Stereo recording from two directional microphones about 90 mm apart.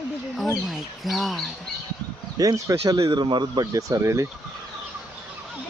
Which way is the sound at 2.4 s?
40° right (ahead or behind).